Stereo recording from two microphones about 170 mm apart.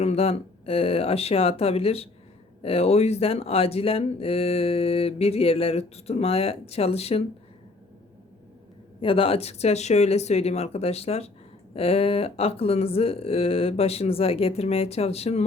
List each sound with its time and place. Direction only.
0.0 s speech: 35° left (ahead or behind)
9.0 s speech: 30° left (ahead or behind)